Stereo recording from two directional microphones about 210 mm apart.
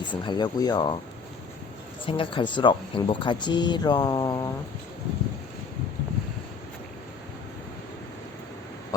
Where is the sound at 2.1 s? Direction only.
25° left (ahead or behind).